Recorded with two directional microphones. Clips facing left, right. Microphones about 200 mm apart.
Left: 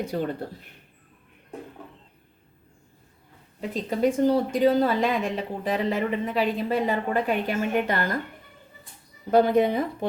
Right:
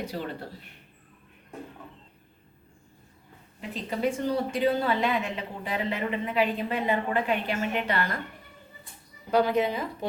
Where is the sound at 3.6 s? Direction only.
45° left (ahead or behind).